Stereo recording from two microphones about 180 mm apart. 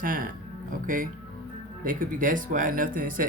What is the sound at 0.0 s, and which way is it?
Speech, 50° right (ahead or behind).